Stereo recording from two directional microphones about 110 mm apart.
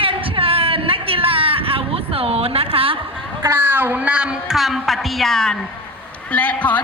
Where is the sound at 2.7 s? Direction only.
55° right (ahead or behind).